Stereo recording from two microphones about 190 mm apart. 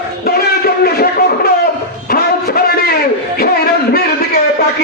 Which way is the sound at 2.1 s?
55° left (ahead or behind).